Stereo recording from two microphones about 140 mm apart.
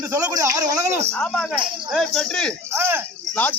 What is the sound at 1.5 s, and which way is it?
Cricket, centre (ahead or behind).